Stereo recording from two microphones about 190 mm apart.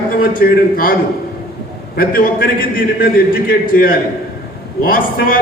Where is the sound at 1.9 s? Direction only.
50° left (ahead or behind).